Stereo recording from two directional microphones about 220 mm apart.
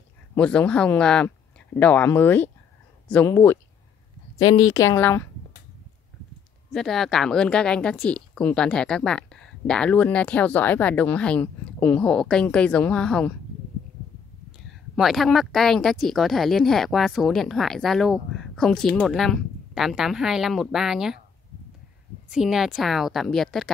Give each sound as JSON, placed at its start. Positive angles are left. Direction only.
{"t": 0.4, "sound": "speech", "side_deg": 5}
{"t": 4.5, "sound": "speech", "side_deg": 75}
{"t": 4.7, "sound": "speech", "side_deg": 15}
{"t": 6.7, "sound": "speech", "side_deg": 0}
{"t": 15.0, "sound": "speech", "side_deg": 0}
{"t": 22.3, "sound": "speech", "side_deg": 0}